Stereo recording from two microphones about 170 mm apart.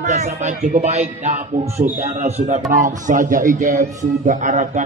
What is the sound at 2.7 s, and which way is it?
A man's voice, 50° right (ahead or behind).